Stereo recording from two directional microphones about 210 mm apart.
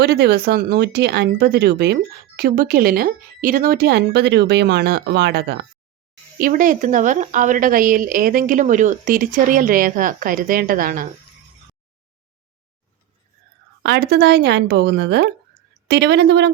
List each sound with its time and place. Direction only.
0.0 s a woman's voice: 50° right (ahead or behind)
13.8 s speech: 50° right (ahead or behind)